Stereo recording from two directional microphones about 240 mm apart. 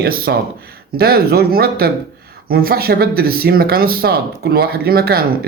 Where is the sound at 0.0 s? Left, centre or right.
Right.